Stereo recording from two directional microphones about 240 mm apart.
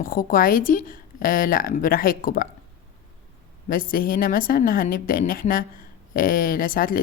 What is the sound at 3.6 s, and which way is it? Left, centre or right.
A woman's voice, left.